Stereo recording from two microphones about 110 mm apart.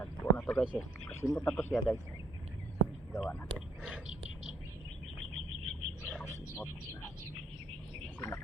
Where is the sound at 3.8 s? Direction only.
10° right (ahead or behind).